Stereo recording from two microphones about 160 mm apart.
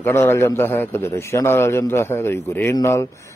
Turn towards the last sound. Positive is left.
turn(degrees=15)  # may be behind; listen again after turning